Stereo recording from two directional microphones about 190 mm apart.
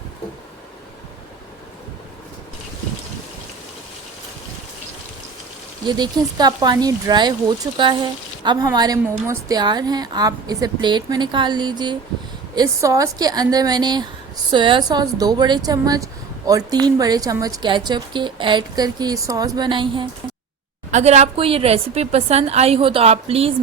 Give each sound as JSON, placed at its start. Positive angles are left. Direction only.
{"t": 5.9, "sound": "a woman's voice", "side_deg": -20}
{"t": 20.9, "sound": "a woman's voice", "side_deg": -35}